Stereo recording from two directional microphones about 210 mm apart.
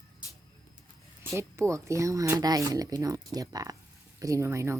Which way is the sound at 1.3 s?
15° right (ahead or behind).